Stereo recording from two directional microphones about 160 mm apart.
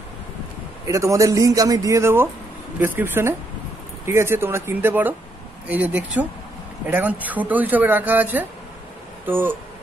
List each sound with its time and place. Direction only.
0.8 s a man's voice: 20° right (ahead or behind)